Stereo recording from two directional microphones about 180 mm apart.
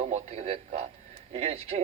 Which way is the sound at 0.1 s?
35° right (ahead or behind).